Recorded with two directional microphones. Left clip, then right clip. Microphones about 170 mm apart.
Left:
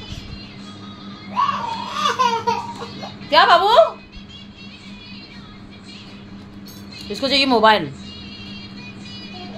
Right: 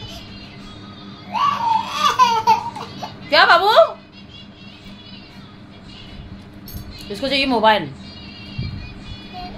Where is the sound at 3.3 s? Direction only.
10° left (ahead or behind).